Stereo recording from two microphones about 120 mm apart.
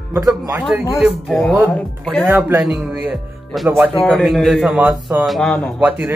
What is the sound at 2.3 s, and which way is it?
Speech, 20° right (ahead or behind).